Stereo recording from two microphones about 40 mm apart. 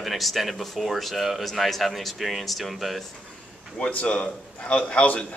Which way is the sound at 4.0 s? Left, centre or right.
Left.